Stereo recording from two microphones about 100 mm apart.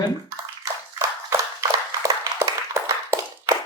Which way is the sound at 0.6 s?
30° right (ahead or behind).